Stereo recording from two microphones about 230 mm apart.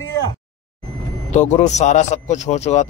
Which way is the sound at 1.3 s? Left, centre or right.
Left.